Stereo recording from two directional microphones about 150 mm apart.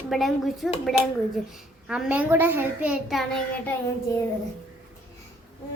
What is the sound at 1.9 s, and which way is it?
A child's voice, 10° right (ahead or behind).